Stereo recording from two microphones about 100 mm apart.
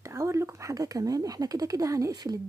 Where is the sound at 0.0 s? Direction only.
30° right (ahead or behind).